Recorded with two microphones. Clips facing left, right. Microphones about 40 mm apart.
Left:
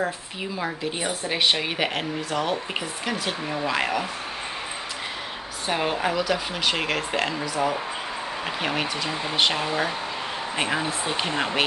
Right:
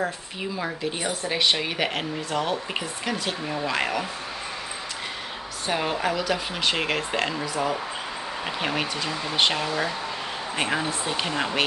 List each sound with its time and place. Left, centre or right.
0.0 s speech: centre
5.7 s speech: centre
9.1 s speech: centre
9.4 s speech: centre
9.7 s speech: centre
10.5 s speech: centre
11.2 s speech: centre